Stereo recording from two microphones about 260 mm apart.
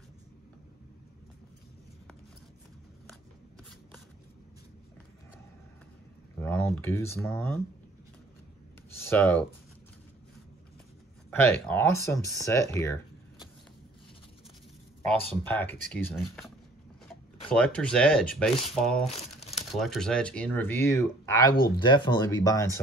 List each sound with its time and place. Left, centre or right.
6.4 s speech: centre
9.0 s speech: centre
11.2 s speech: centre
15.4 s speech: centre